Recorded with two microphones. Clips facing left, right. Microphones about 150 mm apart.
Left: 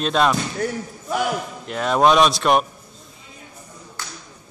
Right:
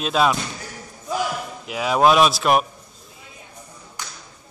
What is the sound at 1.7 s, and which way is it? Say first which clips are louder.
Speech: even; 5° right (ahead or behind).